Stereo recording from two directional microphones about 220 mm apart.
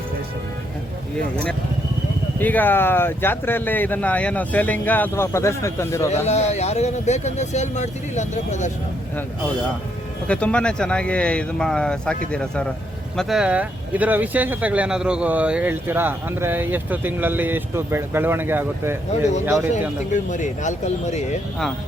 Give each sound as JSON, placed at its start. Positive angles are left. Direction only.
{"t": 2.4, "sound": "speech", "side_deg": 10}
{"t": 6.2, "sound": "speech", "side_deg": 30}
{"t": 10.2, "sound": "speech", "side_deg": 5}
{"t": 20.1, "sound": "speech", "side_deg": 35}